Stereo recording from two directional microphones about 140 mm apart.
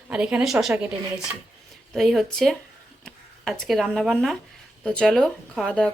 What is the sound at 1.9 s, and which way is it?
Speech, centre (ahead or behind).